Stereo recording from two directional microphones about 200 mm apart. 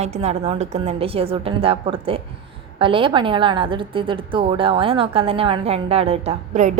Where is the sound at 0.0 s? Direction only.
35° right (ahead or behind).